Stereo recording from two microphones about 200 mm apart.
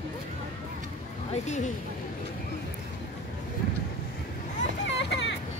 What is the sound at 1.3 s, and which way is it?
Speech, 35° left (ahead or behind).